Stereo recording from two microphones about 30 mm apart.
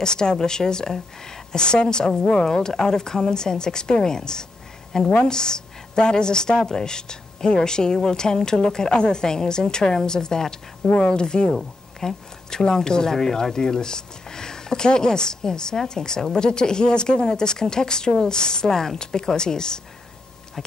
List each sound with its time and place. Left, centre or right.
0.0 s speech: left
1.6 s a woman's voice: left